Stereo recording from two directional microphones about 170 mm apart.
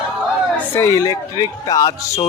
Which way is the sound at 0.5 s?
15° left (ahead or behind).